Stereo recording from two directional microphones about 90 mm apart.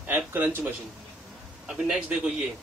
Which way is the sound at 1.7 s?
10° right (ahead or behind).